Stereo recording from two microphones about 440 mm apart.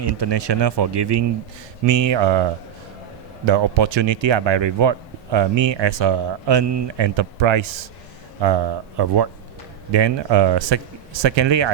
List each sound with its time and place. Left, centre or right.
0.0 s speech: right
3.4 s speech: right
8.4 s speech: right